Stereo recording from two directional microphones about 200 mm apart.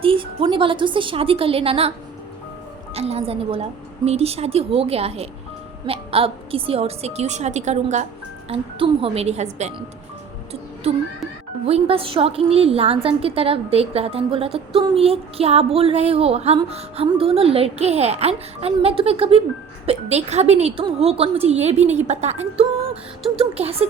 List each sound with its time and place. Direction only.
0.0 s a woman's voice: 25° right (ahead or behind)
2.9 s a woman's voice: 30° right (ahead or behind)
10.8 s a woman's voice: 30° right (ahead or behind)